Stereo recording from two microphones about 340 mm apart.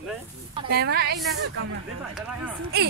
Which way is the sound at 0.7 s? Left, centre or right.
Right.